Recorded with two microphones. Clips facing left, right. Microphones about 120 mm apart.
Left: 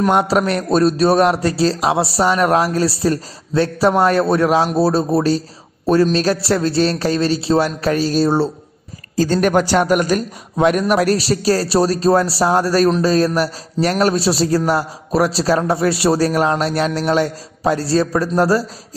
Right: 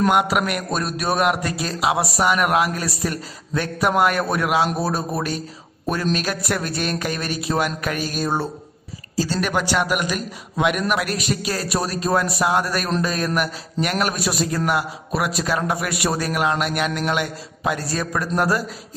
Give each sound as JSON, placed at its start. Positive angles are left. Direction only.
{"t": 0.1, "sound": "a man's voice", "side_deg": 30}
{"t": 9.1, "sound": "a man's voice", "side_deg": 45}